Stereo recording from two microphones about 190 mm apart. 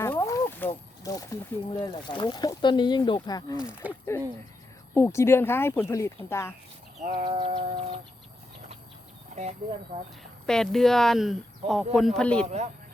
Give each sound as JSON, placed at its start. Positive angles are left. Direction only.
{"t": 0.0, "sound": "speech", "side_deg": 15}
{"t": 3.6, "sound": "speech", "side_deg": -5}
{"t": 4.9, "sound": "speech", "side_deg": 15}
{"t": 7.3, "sound": "music", "side_deg": -25}
{"t": 9.3, "sound": "speech", "side_deg": -35}
{"t": 10.4, "sound": "speech", "side_deg": 5}
{"t": 12.5, "sound": "a man's voice", "side_deg": -35}